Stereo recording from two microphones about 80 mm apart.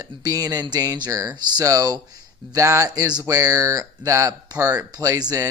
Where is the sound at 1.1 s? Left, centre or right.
Right.